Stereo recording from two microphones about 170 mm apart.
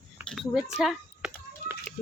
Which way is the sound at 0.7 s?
5° right (ahead or behind).